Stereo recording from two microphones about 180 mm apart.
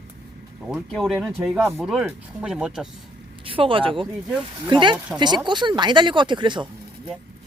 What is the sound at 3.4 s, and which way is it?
Speech, 30° right (ahead or behind).